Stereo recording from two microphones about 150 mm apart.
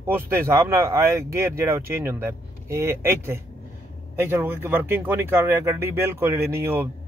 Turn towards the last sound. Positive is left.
turn(degrees=-15)  # may be behind; listen again after turning